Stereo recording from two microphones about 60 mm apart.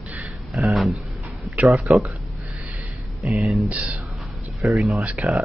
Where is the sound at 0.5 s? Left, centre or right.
Centre.